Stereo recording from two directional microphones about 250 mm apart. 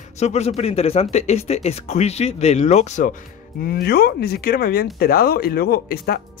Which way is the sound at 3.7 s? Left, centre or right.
Left.